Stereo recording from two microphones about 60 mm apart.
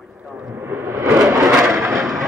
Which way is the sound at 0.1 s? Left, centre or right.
Centre.